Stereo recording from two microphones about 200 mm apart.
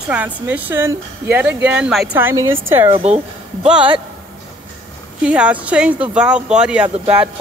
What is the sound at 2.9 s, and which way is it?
Speech, 35° right (ahead or behind).